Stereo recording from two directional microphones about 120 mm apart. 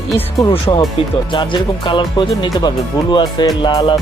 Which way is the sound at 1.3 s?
40° left (ahead or behind).